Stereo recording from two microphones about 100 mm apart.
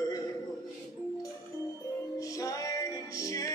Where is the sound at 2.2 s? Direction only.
35° left (ahead or behind).